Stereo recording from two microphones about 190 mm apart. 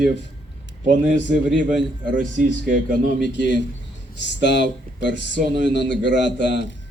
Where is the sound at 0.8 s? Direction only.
45° right (ahead or behind).